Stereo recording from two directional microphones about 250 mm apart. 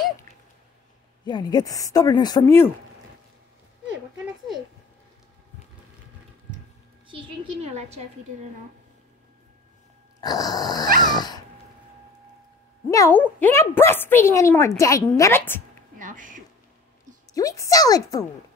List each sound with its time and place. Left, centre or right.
1.2 s a woman's voice: centre
7.1 s a woman's voice: right
10.2 s a woman's voice: centre
11.0 s dog: centre
12.9 s a woman's voice: centre
16.0 s speech: right
17.3 s a woman's voice: centre